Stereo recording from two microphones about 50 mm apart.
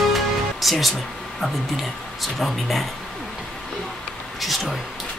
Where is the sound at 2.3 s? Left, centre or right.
Centre.